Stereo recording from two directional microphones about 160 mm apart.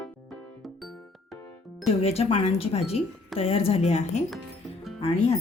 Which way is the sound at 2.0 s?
40° left (ahead or behind).